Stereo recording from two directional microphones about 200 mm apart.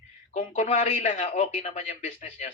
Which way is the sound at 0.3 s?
35° left (ahead or behind).